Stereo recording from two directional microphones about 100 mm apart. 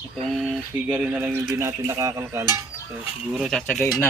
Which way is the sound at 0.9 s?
15° right (ahead or behind).